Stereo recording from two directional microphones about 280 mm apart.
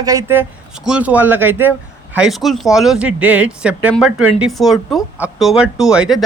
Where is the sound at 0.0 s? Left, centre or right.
Centre.